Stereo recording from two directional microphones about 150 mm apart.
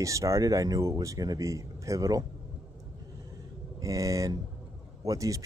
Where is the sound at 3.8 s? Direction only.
20° right (ahead or behind).